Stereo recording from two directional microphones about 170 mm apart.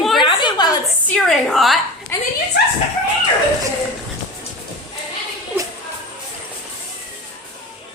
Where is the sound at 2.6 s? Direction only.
75° left (ahead or behind).